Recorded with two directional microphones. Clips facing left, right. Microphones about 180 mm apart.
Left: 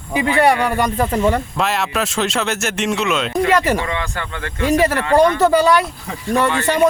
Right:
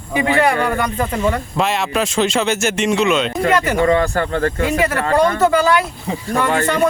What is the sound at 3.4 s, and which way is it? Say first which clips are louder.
Speech: even; 40° right (ahead or behind).